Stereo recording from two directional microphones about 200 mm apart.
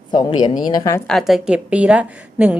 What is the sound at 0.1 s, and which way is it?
Speech, 25° left (ahead or behind).